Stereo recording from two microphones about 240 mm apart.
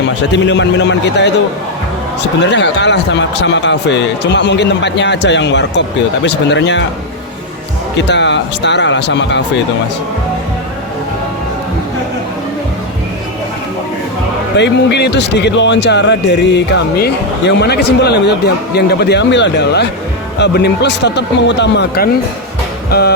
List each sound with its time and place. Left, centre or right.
0.3 s speech: left
2.4 s speech: left
8.0 s speech: left
14.5 s speech: left
22.9 s music: left